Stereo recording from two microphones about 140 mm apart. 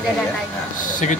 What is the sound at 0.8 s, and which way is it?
Speech, 65° left (ahead or behind).